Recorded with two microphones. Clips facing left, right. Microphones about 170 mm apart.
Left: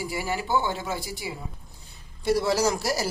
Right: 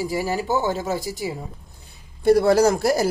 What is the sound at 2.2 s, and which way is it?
Speech, 55° right (ahead or behind).